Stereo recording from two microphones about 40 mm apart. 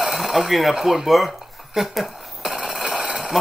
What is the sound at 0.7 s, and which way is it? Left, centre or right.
Speech, centre.